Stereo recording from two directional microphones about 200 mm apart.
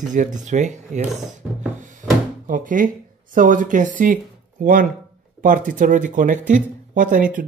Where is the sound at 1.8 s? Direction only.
40° right (ahead or behind).